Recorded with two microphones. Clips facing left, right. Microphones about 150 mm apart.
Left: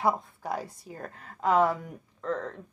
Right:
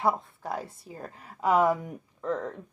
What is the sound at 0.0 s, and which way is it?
A woman's voice, centre (ahead or behind).